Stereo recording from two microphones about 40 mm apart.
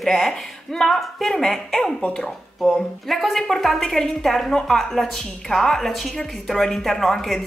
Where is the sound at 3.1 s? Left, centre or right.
Centre.